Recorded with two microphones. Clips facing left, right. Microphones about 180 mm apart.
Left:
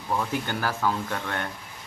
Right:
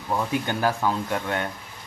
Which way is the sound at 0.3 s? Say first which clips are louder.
Right 4 dB; 20° right (ahead or behind).